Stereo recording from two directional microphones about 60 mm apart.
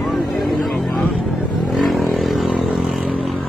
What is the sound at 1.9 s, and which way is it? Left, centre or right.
Vehicle, centre.